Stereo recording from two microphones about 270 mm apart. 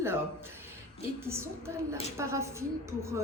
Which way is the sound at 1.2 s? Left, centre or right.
Centre.